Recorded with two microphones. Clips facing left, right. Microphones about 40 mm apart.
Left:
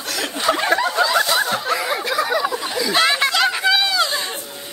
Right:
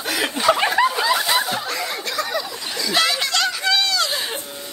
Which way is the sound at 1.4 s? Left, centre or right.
Centre.